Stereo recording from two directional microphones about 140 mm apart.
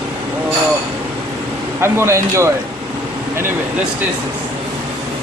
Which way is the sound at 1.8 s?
20° right (ahead or behind).